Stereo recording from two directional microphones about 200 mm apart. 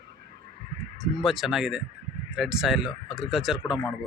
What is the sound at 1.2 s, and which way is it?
Speech, centre (ahead or behind).